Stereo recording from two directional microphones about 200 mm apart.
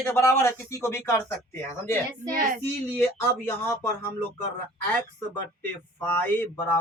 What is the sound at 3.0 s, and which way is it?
Speech, 15° left (ahead or behind).